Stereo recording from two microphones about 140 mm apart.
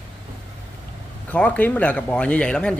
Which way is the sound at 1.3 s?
10° left (ahead or behind).